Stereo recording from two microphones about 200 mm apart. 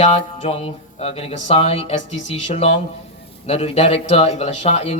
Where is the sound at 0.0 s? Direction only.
30° left (ahead or behind).